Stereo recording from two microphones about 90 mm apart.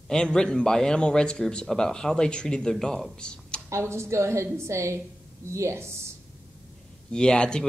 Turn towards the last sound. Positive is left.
turn(degrees=10)  # may be behind; listen again after turning